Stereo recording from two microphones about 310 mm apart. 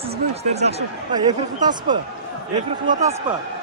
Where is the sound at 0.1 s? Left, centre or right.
Right.